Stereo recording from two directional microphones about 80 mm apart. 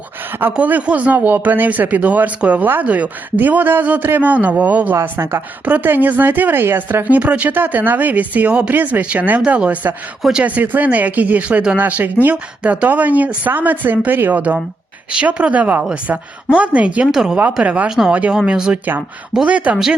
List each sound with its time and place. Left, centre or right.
0.5 s a woman's voice: centre